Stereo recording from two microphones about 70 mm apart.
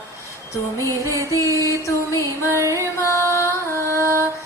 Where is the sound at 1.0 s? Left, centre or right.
Right.